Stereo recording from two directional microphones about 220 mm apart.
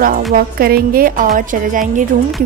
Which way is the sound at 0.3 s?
40° right (ahead or behind).